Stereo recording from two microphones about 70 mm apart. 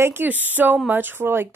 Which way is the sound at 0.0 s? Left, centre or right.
Right.